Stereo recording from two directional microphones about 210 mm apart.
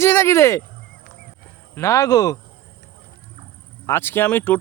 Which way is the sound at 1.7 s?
15° left (ahead or behind).